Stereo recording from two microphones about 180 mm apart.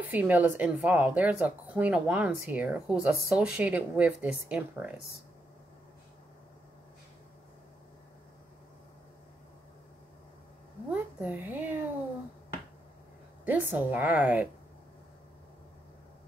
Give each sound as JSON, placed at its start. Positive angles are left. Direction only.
{"t": 0.0, "sound": "speech", "side_deg": -10}
{"t": 10.9, "sound": "speech", "side_deg": -10}
{"t": 13.5, "sound": "speech", "side_deg": -10}